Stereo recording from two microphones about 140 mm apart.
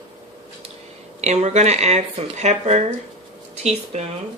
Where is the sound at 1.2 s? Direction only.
55° right (ahead or behind).